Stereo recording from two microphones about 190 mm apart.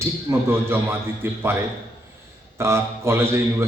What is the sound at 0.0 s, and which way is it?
A man's voice, 10° right (ahead or behind).